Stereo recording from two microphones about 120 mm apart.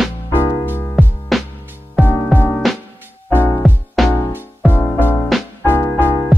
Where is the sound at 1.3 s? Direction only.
Centre (ahead or behind).